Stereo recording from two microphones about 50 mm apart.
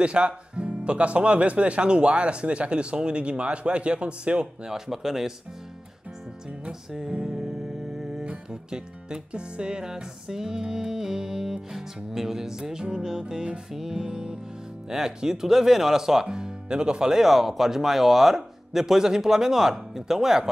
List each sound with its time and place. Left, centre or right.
0.0 s speech: right
4.7 s music: centre
6.9 s music: centre
8.3 s music: centre